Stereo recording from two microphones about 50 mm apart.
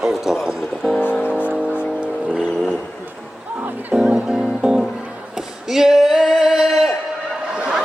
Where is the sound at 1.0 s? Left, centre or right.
Left.